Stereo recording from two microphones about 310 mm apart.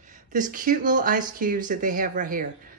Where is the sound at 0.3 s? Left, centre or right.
Right.